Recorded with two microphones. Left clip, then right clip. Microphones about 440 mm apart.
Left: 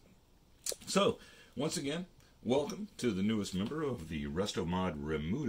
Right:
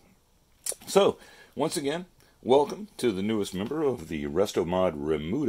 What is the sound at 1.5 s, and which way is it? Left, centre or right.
Speech, centre.